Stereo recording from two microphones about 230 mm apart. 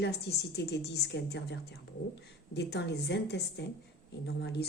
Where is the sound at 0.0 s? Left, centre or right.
Left.